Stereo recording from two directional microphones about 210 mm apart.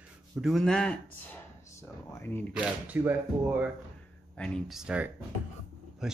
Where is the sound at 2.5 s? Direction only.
5° right (ahead or behind).